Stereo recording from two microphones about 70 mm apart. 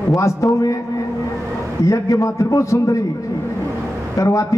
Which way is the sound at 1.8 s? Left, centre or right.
Left.